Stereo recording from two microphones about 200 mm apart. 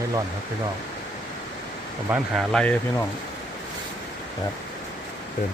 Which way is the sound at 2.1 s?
Centre (ahead or behind).